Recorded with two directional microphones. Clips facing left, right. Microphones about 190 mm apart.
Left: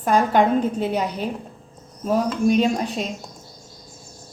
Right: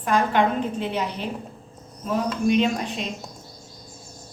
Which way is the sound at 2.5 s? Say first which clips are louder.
Left 2 dB; 40° left (ahead or behind).